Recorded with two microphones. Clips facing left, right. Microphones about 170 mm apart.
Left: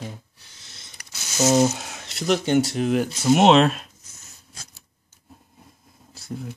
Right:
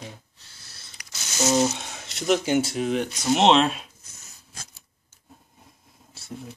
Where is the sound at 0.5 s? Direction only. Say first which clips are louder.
Left 1 dB; 20° left (ahead or behind).